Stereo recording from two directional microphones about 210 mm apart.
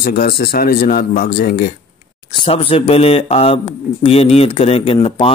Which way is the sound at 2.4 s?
25° left (ahead or behind).